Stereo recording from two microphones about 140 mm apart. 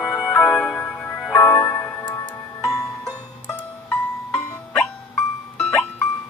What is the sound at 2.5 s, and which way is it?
Music, 25° left (ahead or behind).